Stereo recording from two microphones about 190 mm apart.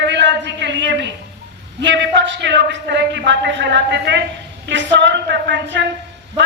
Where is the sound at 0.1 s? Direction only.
70° right (ahead or behind).